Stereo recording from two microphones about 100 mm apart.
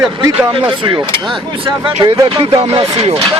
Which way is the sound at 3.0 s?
90° right.